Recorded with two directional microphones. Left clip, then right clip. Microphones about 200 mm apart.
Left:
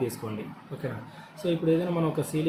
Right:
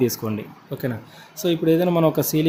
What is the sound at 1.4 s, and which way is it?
Speech, 60° right (ahead or behind).